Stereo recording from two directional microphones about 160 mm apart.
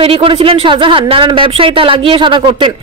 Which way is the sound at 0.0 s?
35° right (ahead or behind).